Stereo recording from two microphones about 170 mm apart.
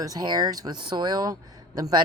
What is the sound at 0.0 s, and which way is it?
Speech, 20° right (ahead or behind).